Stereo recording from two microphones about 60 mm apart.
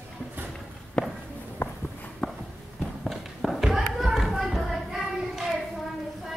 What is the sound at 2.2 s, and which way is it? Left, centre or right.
Walk, centre.